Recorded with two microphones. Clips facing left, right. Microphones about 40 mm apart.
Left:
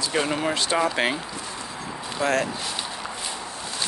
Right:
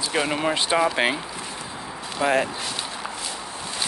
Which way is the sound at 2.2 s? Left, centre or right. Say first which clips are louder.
Right 2 dB; centre.